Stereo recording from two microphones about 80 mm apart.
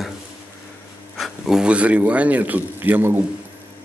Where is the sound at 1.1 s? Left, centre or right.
Centre.